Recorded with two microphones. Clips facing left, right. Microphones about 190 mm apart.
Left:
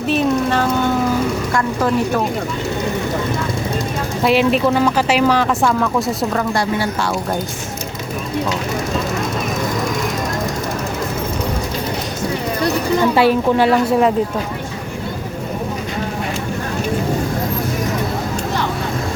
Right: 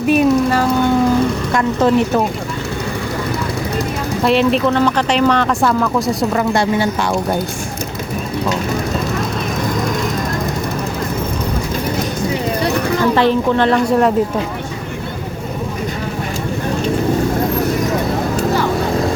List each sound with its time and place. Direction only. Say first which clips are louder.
0.1 s speech: right 4 dB; 10° right (ahead or behind)
1.5 s a woman's voice: right 5 dB; 20° right (ahead or behind)
4.2 s speech: right 1 dB; 5° left (ahead or behind)
6.5 s a woman's voice: right 3 dB; 25° right (ahead or behind)
13.1 s a woman's voice: left 1 dB; 10° left (ahead or behind)